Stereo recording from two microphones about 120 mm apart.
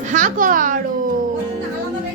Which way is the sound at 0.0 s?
90° right.